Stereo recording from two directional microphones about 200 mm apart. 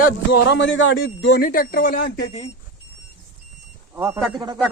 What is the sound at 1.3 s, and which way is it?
Speech, 50° left (ahead or behind).